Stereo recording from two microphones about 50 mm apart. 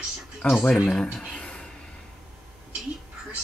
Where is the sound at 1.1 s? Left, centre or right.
Centre.